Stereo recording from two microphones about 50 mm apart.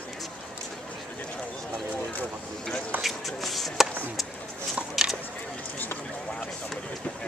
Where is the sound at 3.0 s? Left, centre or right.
Centre.